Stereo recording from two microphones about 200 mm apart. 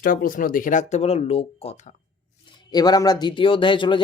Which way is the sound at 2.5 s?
20° left (ahead or behind).